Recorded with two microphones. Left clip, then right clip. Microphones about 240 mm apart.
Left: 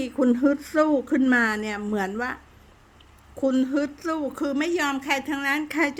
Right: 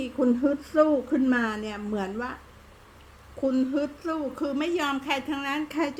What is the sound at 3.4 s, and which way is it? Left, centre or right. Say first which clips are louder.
A woman's voice: left 3 dB; left.